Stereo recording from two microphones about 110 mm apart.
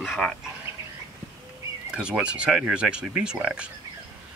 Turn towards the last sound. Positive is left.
turn(degrees=-10)  # may be behind; listen again after turning